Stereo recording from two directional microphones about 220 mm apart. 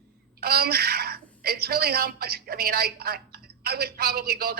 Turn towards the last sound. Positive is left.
turn(degrees=-45)  # may be behind; listen again after turning